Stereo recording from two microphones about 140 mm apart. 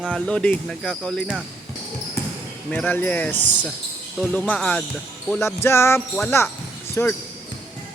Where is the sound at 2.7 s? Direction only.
10° left (ahead or behind).